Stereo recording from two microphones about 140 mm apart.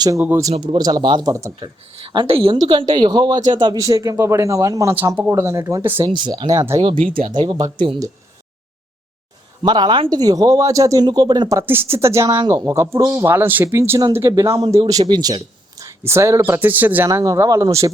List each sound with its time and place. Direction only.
0.2 s speech: 15° right (ahead or behind)
0.5 s speech: 35° right (ahead or behind)
1.5 s speech: 35° right (ahead or behind); by 6.1 s 20° right (ahead or behind)
6.1 s speech: 35° right (ahead or behind)
9.6 s speech: 30° right (ahead or behind)